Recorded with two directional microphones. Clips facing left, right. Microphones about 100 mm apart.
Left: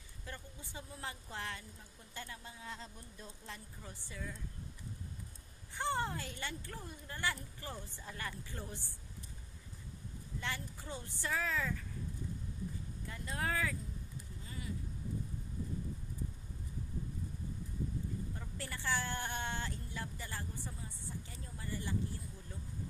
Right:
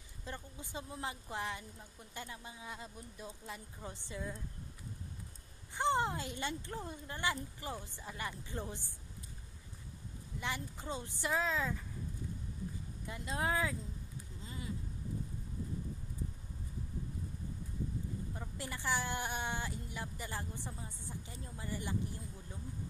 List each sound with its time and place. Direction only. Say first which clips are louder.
0.2 s speech: right 3 dB; 20° right (ahead or behind)
3.8 s speech: right 5 dB; 20° right (ahead or behind)
5.8 s speech: right 4 dB; 20° right (ahead or behind)
10.4 s speech: right 3 dB; 20° right (ahead or behind)
13.0 s speech: right 3 dB; 20° right (ahead or behind)
14.4 s a sound: right 2 dB; 20° right (ahead or behind)
18.4 s speech: right 2 dB; 20° right (ahead or behind)